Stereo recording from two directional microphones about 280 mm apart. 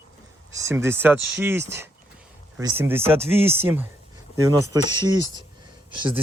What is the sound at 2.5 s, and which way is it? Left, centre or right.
Speech, centre.